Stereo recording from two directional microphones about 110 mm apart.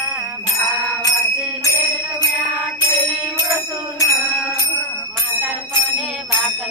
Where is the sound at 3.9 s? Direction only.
25° left (ahead or behind).